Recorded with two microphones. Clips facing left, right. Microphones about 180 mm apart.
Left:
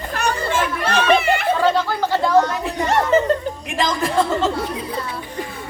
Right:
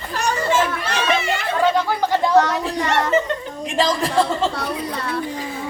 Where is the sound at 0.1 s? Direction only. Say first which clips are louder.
Right 2 dB; 55° left (ahead or behind).